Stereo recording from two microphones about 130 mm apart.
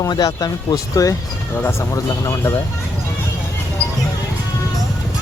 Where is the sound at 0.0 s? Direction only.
30° left (ahead or behind).